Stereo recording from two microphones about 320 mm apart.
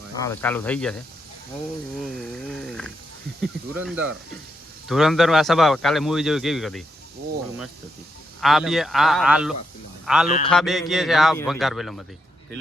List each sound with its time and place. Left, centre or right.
0.2 s a man's voice: centre
8.4 s a man's voice: centre
10.2 s a sound: left
10.5 s a man's voice: centre